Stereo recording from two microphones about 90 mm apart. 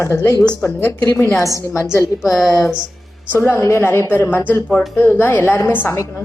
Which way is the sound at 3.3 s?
25° left (ahead or behind).